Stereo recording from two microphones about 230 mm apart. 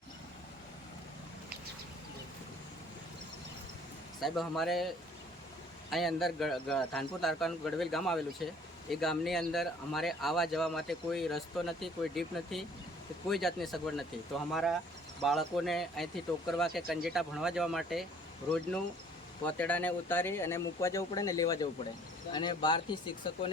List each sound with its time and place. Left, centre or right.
4.2 s speech: centre
5.9 s speech: centre
19.5 s speech: centre